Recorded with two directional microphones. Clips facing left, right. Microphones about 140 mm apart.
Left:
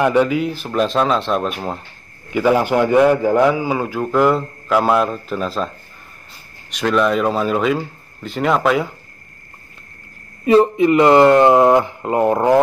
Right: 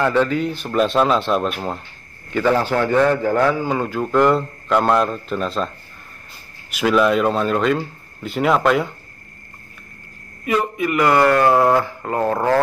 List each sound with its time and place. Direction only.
0.0 s speech: 10° left (ahead or behind)
2.3 s a man's voice: 10° left (ahead or behind)
6.7 s speech: 5° right (ahead or behind)
10.4 s speech: 30° left (ahead or behind)